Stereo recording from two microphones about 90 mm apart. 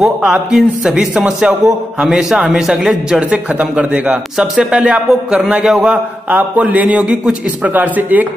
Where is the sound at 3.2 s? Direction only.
15° right (ahead or behind).